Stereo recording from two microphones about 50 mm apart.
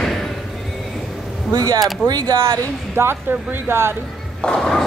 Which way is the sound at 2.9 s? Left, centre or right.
Right.